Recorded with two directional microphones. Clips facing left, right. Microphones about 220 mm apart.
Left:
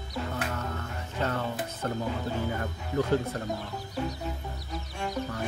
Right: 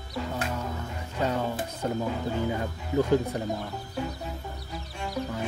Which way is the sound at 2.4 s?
15° right (ahead or behind).